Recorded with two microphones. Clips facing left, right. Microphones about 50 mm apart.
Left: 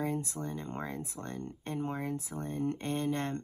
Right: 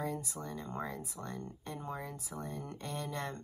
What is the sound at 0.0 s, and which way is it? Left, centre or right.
Speech, left.